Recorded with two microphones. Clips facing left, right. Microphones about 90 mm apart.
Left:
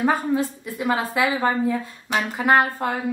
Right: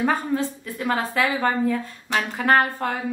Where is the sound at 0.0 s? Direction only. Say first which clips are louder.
Left 2 dB; 10° left (ahead or behind).